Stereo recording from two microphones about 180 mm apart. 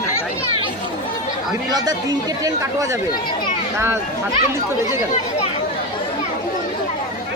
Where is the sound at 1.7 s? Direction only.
20° right (ahead or behind).